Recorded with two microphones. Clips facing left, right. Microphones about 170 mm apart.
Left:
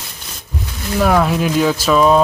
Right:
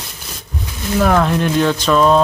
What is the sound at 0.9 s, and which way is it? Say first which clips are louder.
Speech: even; 5° left (ahead or behind).